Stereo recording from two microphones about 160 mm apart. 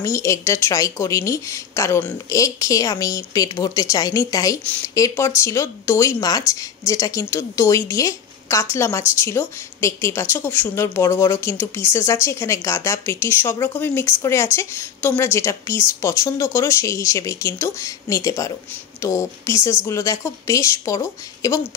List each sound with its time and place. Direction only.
0.0 s speech: 20° left (ahead or behind)
4.6 s speech: 10° left (ahead or behind)